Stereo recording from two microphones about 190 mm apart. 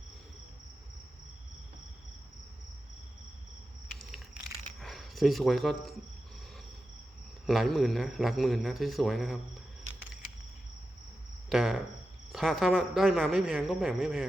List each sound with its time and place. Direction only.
4.8 s speech: centre (ahead or behind)
7.4 s speech: centre (ahead or behind)
11.4 s speech: centre (ahead or behind)